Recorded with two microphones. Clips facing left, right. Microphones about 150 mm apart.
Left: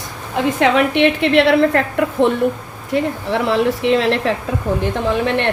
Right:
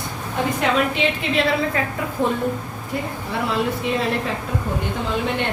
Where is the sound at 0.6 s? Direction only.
70° left (ahead or behind).